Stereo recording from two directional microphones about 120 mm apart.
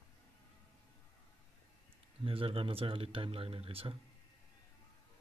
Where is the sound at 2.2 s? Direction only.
50° right (ahead or behind).